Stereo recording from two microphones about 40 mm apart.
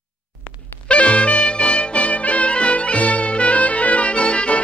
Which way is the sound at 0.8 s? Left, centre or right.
Left.